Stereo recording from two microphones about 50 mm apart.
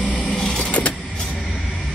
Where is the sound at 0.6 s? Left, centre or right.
Left.